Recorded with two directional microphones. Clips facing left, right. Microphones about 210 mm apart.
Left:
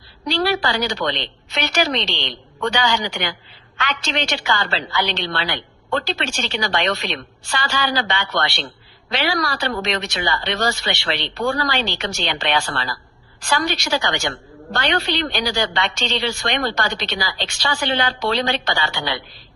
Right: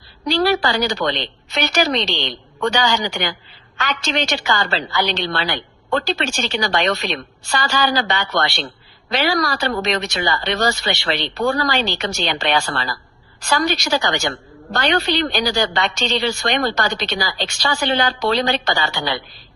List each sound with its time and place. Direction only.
0.3 s a woman's voice: 40° right (ahead or behind)